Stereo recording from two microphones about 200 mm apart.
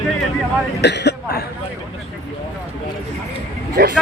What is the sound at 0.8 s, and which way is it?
Throat clearing, 60° left (ahead or behind).